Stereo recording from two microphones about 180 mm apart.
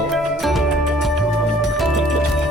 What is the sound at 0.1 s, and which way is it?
Music, centre (ahead or behind).